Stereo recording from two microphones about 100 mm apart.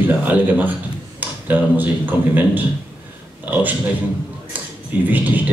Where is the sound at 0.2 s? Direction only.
15° right (ahead or behind).